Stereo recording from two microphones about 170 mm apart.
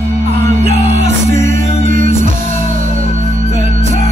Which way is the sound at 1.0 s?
45° right (ahead or behind).